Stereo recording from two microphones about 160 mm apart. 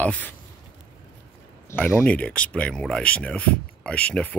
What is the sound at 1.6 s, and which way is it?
Speech, 10° left (ahead or behind).